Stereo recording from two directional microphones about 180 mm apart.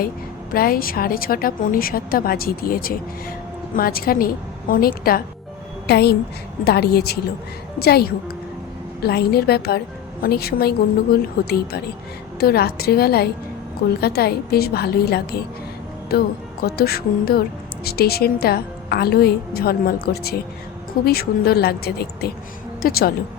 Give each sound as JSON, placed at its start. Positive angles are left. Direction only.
{"t": 0.5, "sound": "a woman's voice", "side_deg": 55}